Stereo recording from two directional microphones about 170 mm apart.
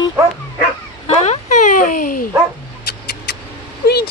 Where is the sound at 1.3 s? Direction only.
45° left (ahead or behind).